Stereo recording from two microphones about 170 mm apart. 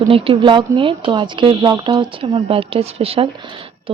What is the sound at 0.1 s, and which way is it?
Speech, 30° right (ahead or behind).